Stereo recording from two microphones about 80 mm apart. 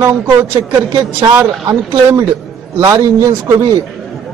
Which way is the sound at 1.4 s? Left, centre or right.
Right.